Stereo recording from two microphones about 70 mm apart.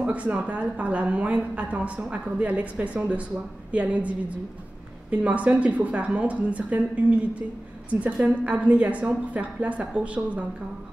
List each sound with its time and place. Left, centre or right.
0.0 s a woman's voice: centre